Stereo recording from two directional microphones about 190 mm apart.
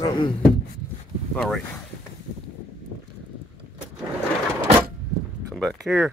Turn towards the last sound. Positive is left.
turn(degrees=0)  # may be behind; listen again after turning